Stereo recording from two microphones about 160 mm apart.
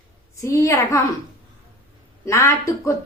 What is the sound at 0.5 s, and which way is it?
Speech, 20° left (ahead or behind).